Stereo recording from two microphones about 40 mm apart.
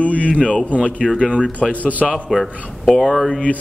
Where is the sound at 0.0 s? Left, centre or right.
Left.